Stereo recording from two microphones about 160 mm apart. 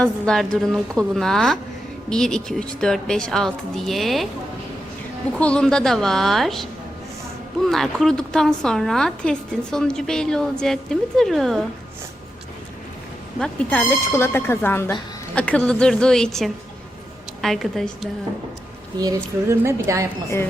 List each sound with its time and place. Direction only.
0.0 s speech: 5° left (ahead or behind)
5.4 s speech: 5° left (ahead or behind)
13.4 s speech: 10° left (ahead or behind)
18.9 s a woman's voice: 20° right (ahead or behind)